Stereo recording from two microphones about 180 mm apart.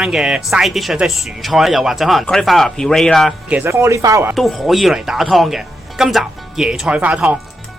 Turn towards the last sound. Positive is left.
turn(degrees=-5)  # may be behind; listen again after turning